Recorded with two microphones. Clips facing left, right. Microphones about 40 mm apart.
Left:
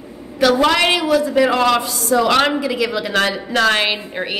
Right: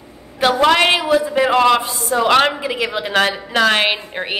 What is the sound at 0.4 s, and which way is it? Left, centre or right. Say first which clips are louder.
A woman's voice: right 1 dB; right.